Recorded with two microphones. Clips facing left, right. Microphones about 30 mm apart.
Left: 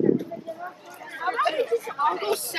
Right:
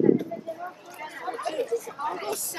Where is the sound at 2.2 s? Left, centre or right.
Left.